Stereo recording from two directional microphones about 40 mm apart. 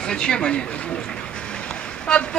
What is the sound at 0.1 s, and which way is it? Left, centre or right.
Speech, left.